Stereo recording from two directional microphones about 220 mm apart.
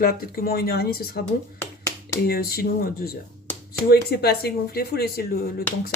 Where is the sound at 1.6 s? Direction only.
10° left (ahead or behind).